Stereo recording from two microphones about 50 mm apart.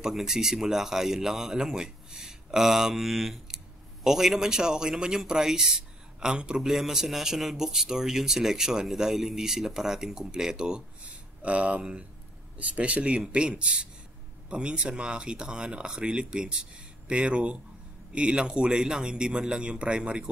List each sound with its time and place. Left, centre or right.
0.0 s speech: centre
11.4 s speech: right